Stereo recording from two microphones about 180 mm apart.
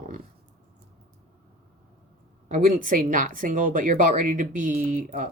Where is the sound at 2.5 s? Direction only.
45° right (ahead or behind).